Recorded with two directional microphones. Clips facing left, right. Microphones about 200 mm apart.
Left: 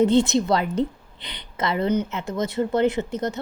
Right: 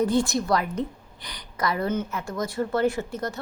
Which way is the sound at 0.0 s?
25° left (ahead or behind).